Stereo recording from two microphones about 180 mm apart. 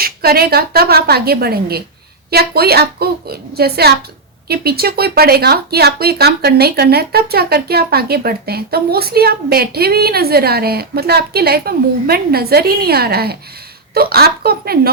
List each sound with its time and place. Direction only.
0.0 s speech: 60° right (ahead or behind)